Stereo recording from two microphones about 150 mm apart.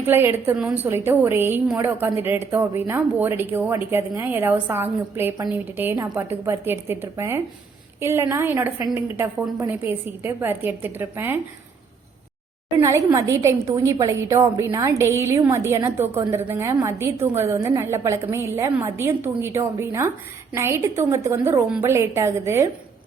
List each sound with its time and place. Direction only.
0.0 s a woman's voice: 15° right (ahead or behind)
12.8 s a woman's voice: 20° right (ahead or behind)